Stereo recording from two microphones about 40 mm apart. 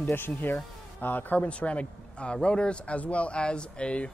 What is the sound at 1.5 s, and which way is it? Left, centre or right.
A man's voice, left.